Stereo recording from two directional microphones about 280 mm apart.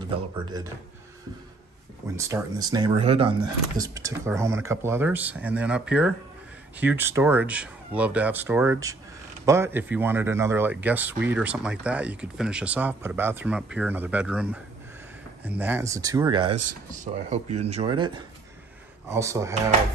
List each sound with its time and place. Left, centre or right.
0.0 s speech: centre
2.1 s speech: centre